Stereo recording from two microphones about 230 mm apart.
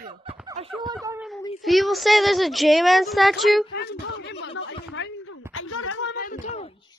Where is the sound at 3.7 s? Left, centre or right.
Left.